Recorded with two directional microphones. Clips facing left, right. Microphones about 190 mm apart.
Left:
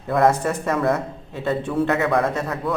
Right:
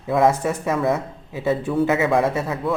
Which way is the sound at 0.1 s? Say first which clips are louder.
Even; 5° right (ahead or behind).